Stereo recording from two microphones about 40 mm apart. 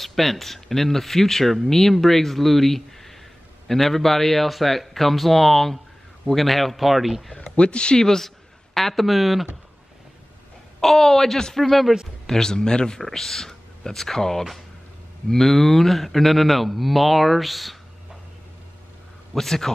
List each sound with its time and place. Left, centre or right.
0.0 s speech: centre
7.5 s speech: left; by 9.5 s centre
10.8 s speech: centre
12.3 s speech: centre
13.0 s speech: centre
19.3 s speech: centre